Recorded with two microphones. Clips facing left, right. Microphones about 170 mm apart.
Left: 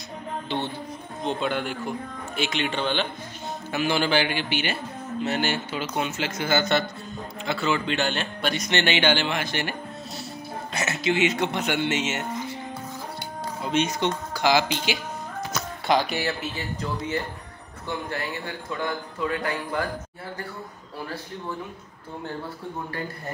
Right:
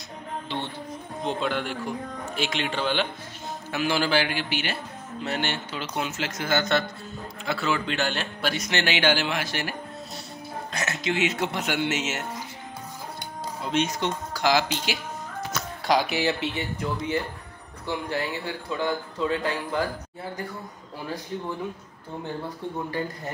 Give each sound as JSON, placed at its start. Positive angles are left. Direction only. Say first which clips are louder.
{"t": 1.2, "sound": "speech", "louder": "left 1 dB", "side_deg": 0}
{"t": 13.7, "sound": "speech", "louder": "left 2 dB", "side_deg": 0}
{"t": 16.5, "sound": "a man's voice", "louder": "right 1 dB", "side_deg": -15}